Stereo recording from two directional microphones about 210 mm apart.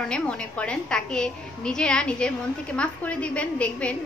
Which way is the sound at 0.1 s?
5° left (ahead or behind).